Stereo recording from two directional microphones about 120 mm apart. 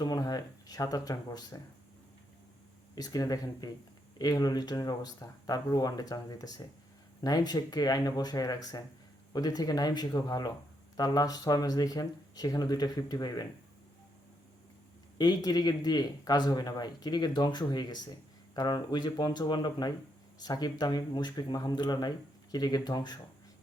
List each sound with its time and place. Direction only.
0.0 s speech: 35° left (ahead or behind)
2.9 s speech: 35° left (ahead or behind)
15.2 s speech: 35° left (ahead or behind)